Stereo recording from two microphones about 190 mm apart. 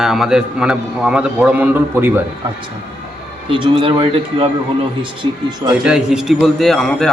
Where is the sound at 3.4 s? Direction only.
25° right (ahead or behind).